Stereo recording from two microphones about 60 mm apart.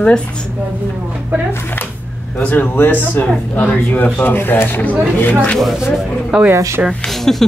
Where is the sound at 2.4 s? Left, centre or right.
Left.